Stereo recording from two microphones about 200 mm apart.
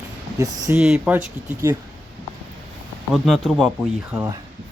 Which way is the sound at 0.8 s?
5° right (ahead or behind).